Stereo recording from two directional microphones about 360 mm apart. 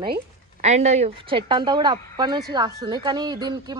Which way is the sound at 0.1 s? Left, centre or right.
Centre.